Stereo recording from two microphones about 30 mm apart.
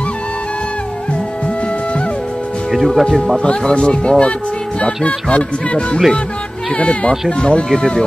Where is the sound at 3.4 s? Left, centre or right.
Left.